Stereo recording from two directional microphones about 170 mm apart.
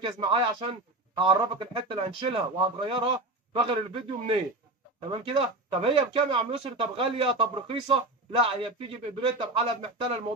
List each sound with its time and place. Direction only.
0.0 s speech: 30° right (ahead or behind)